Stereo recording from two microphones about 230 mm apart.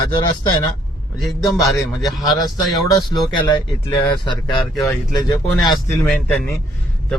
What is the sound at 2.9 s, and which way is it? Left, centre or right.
Speech, centre.